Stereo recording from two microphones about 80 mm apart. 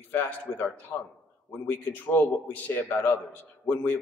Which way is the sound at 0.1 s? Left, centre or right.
Left.